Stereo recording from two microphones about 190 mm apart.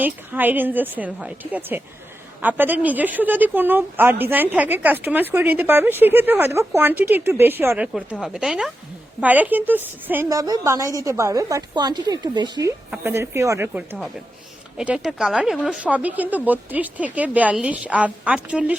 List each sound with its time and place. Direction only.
0.0 s a woman's voice: 10° right (ahead or behind)